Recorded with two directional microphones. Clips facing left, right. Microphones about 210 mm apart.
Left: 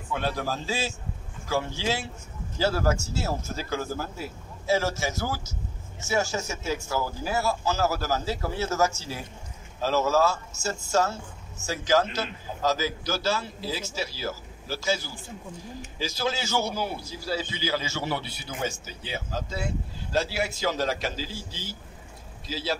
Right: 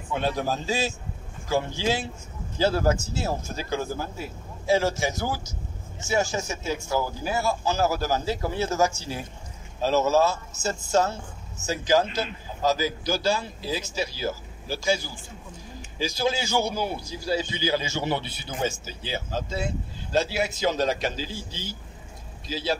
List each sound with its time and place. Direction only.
0.1 s a man's voice: 20° right (ahead or behind)